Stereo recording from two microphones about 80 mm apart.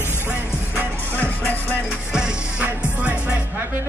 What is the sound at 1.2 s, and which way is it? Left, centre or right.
Music, left.